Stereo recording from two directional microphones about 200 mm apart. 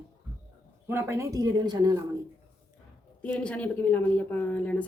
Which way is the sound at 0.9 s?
15° right (ahead or behind).